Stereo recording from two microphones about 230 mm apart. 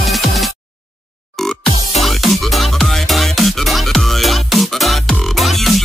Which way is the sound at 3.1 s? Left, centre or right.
Centre.